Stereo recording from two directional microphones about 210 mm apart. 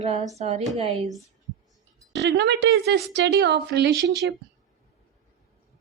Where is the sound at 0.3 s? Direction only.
30° right (ahead or behind).